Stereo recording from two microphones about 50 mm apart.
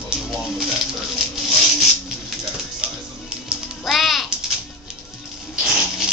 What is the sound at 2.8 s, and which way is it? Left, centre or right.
Music, right.